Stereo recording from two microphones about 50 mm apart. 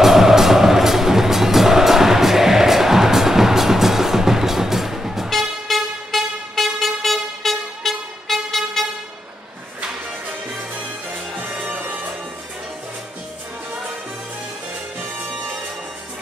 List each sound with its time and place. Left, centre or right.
0.0 s music: centre
5.3 s vehicle: centre
11.7 s music: right
15.0 s music: right